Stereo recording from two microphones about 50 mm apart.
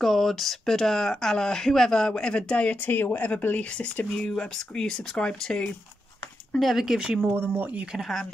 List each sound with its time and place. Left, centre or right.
0.0 s speech: centre; by 3.3 s left
3.7 s speech: left
4.3 s speech: centre
6.6 s speech: centre
7.3 s speech: right
8.0 s speech: centre